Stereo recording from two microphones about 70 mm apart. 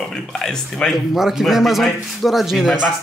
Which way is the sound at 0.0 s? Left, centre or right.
Centre.